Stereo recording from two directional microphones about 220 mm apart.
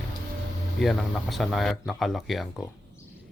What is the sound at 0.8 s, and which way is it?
Speech, centre (ahead or behind).